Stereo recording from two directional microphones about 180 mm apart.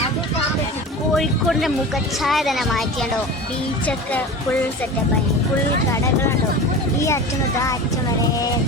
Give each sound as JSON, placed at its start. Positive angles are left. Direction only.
{"t": 1.1, "sound": "speech", "side_deg": 0}